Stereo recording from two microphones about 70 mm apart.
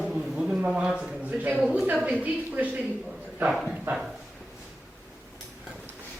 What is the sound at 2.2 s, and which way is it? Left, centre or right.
Speech, right.